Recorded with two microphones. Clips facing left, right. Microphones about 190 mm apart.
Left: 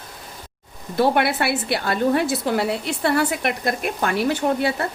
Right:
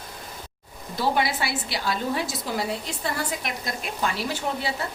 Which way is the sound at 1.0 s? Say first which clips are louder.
Left 6 dB; 60° left (ahead or behind).